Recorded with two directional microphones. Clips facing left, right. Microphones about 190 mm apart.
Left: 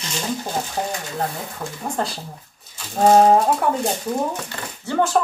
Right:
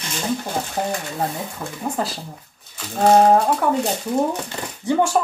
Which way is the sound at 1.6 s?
60° right (ahead or behind).